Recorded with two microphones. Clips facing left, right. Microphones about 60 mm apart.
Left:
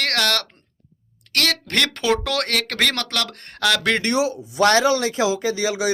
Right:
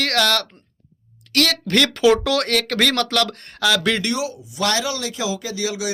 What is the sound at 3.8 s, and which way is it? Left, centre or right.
Speech, left.